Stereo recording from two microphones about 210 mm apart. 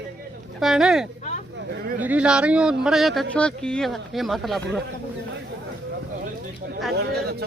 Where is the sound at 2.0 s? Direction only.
5° right (ahead or behind).